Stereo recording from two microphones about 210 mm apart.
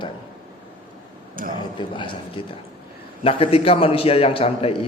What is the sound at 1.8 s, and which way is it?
A man's voice, 20° left (ahead or behind).